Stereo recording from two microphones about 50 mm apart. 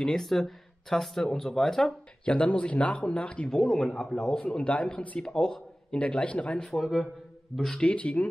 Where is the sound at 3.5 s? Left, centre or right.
Centre.